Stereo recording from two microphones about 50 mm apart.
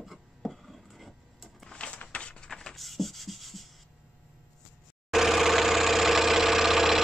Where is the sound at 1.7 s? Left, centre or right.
Left.